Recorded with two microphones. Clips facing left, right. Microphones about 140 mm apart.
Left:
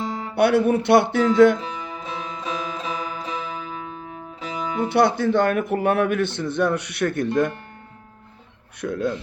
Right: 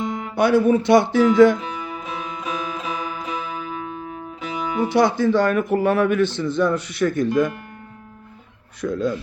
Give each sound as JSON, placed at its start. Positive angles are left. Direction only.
{"t": 0.0, "sound": "music", "side_deg": 30}
{"t": 0.3, "sound": "a man's voice", "side_deg": 60}
{"t": 1.5, "sound": "music", "side_deg": 30}
{"t": 4.9, "sound": "a man's voice", "side_deg": 60}
{"t": 8.8, "sound": "a man's voice", "side_deg": 60}